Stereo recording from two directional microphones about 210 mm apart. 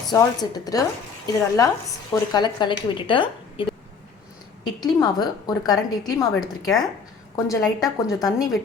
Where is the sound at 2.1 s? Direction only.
20° left (ahead or behind).